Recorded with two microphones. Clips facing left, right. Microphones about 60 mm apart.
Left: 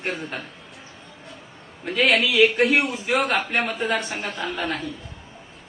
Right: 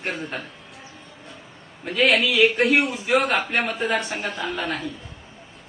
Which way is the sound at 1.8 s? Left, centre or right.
Centre.